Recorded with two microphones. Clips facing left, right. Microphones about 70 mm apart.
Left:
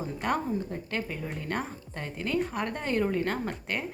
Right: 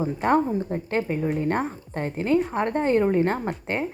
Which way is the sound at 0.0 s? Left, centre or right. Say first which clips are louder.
Right 8 dB; right.